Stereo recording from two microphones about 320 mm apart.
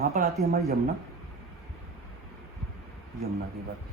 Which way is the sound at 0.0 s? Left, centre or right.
Right.